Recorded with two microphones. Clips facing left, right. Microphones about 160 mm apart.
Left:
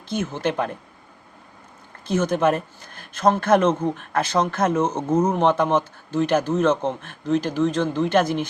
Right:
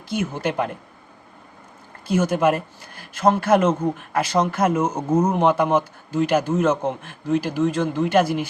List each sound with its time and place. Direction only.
0.1 s speech: 10° right (ahead or behind)
2.0 s speech: 10° right (ahead or behind)